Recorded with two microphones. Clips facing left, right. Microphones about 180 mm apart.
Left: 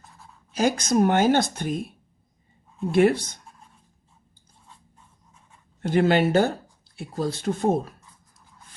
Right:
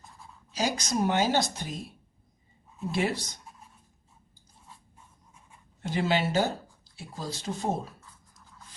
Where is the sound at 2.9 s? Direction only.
55° left (ahead or behind).